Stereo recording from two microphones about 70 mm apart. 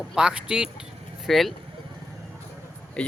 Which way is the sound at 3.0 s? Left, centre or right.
Centre.